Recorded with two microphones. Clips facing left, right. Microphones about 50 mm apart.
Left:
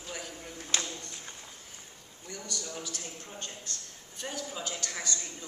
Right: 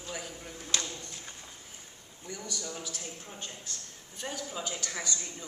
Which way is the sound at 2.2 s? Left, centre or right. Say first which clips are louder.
Right 1 dB; centre.